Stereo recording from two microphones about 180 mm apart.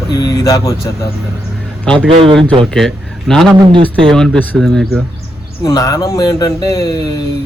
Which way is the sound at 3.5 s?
25° right (ahead or behind).